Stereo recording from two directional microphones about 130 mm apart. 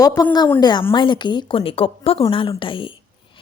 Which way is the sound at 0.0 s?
30° left (ahead or behind).